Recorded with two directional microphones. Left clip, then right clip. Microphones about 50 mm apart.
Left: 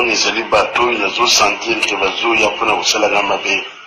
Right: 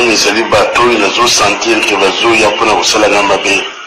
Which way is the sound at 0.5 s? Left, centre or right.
Right.